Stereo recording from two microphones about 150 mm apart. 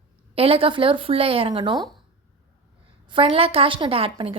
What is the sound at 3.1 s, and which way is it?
Speech, 35° right (ahead or behind).